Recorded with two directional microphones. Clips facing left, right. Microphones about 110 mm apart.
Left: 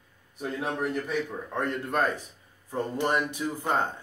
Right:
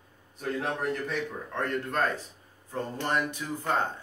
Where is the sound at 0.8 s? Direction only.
10° left (ahead or behind).